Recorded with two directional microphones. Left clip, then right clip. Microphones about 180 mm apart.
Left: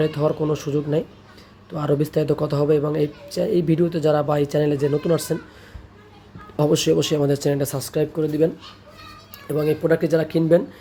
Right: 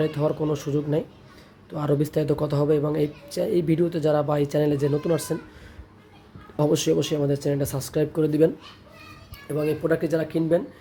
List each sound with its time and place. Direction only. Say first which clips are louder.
0.0 s speech: left 3 dB; 5° left (ahead or behind)
6.6 s speech: left 3 dB; 5° left (ahead or behind)
8.1 s speech: right 1 dB; 20° right (ahead or behind)
9.5 s speech: left 4 dB; 15° left (ahead or behind)